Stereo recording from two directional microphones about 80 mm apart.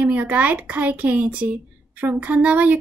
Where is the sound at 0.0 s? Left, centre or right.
Right.